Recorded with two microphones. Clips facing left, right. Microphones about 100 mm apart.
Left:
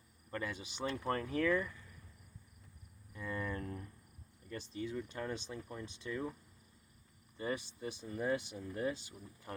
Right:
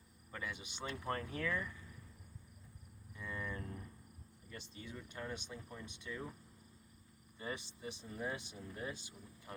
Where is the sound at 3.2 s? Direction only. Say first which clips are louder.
Left 4 dB; 40° left (ahead or behind).